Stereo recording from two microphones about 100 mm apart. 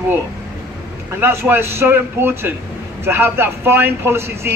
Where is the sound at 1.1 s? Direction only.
20° right (ahead or behind).